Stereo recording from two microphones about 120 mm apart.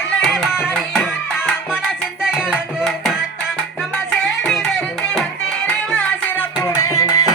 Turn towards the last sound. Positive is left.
turn(degrees=25)  # may be behind; listen again after turning